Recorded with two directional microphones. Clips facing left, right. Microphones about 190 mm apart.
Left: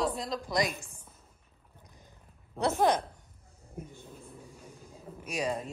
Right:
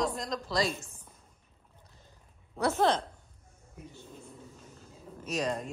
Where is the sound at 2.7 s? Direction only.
15° left (ahead or behind).